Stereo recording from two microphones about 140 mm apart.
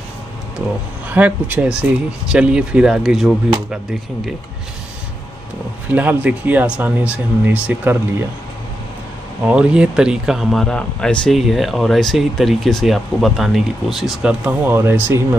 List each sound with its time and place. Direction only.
1.1 s speech: 10° right (ahead or behind)
5.9 s speech: 10° right (ahead or behind)
9.5 s speech: 10° right (ahead or behind)